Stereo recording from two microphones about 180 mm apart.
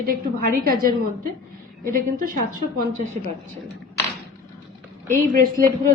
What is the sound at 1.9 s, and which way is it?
A woman's voice, 50° right (ahead or behind).